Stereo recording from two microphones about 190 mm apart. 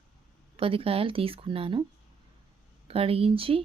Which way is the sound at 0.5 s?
30° right (ahead or behind).